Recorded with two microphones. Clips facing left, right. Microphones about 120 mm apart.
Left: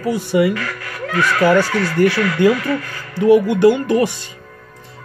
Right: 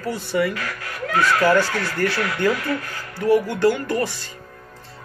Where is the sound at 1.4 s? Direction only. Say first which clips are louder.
Left 7 dB; 15° left (ahead or behind).